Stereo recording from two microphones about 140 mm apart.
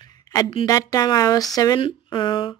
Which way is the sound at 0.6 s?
25° left (ahead or behind).